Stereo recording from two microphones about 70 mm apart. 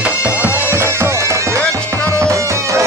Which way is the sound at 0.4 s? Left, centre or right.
Right.